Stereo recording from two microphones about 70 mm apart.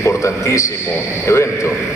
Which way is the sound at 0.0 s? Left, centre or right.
Left.